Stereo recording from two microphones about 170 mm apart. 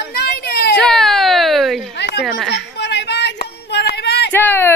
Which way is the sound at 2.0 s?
80° left.